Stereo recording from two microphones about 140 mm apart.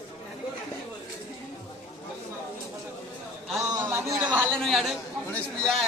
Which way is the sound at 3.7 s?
15° right (ahead or behind).